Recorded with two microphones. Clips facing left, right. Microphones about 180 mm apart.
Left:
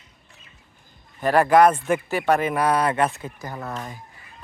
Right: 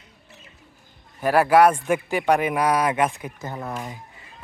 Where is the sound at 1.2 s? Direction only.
10° right (ahead or behind).